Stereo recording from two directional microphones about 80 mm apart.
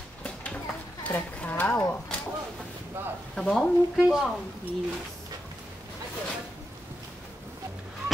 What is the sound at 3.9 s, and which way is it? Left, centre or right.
Speech, centre.